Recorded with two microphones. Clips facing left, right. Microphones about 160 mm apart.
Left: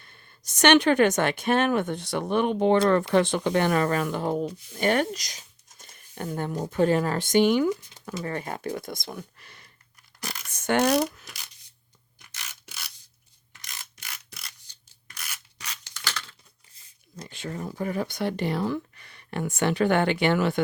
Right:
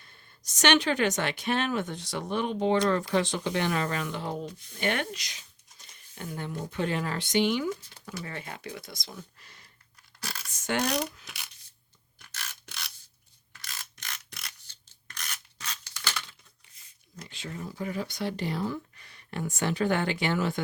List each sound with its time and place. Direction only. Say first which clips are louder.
0.0 s speech: left 2 dB; 60° left (ahead or behind)
10.5 s a sound: left 7 dB; 55° left (ahead or behind)
12.3 s rub: right 1 dB; 10° left (ahead or behind)
13.5 s mechanisms: even; 20° left (ahead or behind); by 14.5 s centre (ahead or behind)
14.7 s filing: right 1 dB; 10° left (ahead or behind)
16.0 s a sound: left 1 dB; 15° right (ahead or behind)
17.2 s speech: left 5 dB; 50° left (ahead or behind); by 20.6 s 65° left (ahead or behind)